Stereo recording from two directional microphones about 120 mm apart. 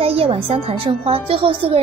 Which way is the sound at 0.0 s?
50° right (ahead or behind).